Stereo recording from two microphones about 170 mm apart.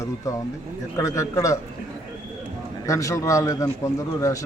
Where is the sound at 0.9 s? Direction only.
20° left (ahead or behind).